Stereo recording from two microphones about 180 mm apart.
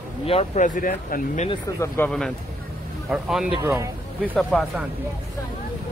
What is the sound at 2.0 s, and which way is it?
Speech, 10° left (ahead or behind).